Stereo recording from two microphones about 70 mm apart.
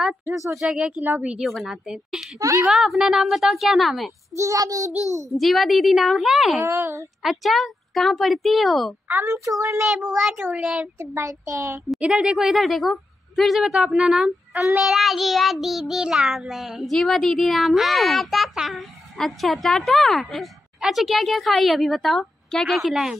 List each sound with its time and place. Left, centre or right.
0.3 s a woman's voice: centre
1.4 s child singing: centre
4.4 s a child's voice: right
5.4 s child singing: centre
6.6 s speech: right
7.2 s child singing: centre
9.2 s a child's voice: right
9.8 s a woman's voice: centre
11.0 s a child's voice: right
12.0 s a woman's voice: centre
14.8 s child singing: centre